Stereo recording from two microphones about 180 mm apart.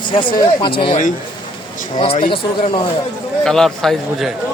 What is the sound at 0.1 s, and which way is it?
Speech, 25° left (ahead or behind).